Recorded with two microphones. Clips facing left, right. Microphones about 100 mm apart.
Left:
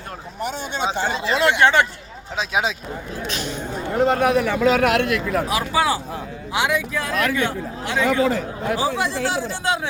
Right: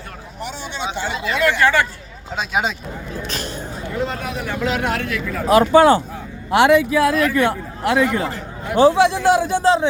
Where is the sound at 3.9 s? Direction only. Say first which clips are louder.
Left 8 dB; 55° left (ahead or behind); by 5.4 s 70° left (ahead or behind).